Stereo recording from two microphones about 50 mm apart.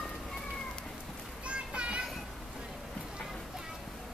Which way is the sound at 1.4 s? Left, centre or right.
Right.